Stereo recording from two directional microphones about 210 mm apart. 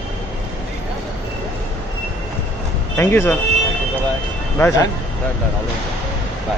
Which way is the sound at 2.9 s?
10° left (ahead or behind).